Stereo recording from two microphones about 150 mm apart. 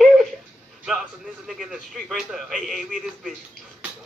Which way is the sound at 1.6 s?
Centre (ahead or behind).